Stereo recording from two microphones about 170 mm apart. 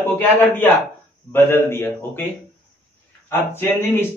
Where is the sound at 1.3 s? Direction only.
15° left (ahead or behind).